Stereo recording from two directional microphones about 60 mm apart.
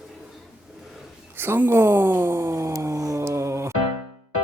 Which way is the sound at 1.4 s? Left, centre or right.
Right.